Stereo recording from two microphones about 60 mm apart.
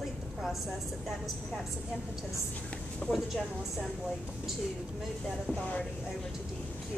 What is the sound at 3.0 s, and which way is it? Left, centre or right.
Speech, left.